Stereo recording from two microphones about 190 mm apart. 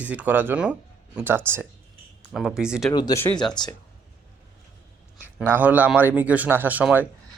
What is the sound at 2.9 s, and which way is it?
Speech, 20° left (ahead or behind).